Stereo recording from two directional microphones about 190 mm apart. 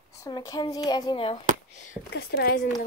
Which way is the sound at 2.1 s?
55° left (ahead or behind).